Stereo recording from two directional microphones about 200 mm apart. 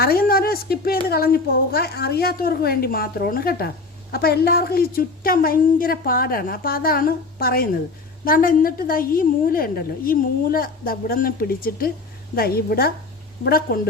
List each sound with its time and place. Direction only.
0.0 s a woman's voice: 50° left (ahead or behind)